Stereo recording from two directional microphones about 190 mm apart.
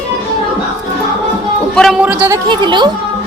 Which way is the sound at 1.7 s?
Centre (ahead or behind).